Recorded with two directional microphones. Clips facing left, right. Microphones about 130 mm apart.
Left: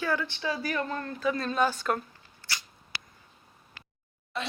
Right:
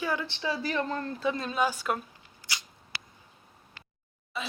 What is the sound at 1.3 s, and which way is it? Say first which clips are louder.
Speech: left 2 dB; 10° right (ahead or behind).